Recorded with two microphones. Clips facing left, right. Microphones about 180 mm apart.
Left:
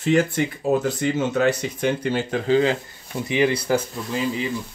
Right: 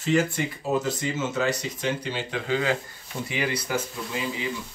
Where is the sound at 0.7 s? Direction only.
55° left (ahead or behind).